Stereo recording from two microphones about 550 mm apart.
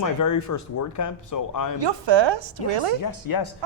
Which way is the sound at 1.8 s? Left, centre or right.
Right.